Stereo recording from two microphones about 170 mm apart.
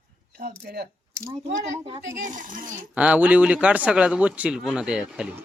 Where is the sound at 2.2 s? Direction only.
50° right (ahead or behind).